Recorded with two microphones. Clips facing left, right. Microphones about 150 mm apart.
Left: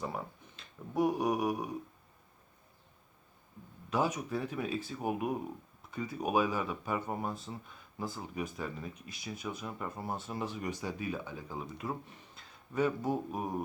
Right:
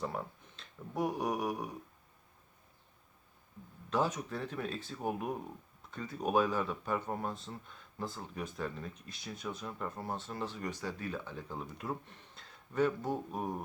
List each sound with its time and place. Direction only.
0.0 s speech: 5° left (ahead or behind)
3.8 s speech: 10° left (ahead or behind)